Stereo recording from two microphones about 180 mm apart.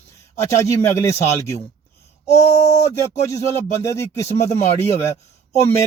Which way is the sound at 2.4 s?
20° left (ahead or behind).